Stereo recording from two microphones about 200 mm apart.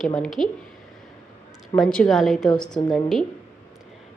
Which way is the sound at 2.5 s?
20° left (ahead or behind).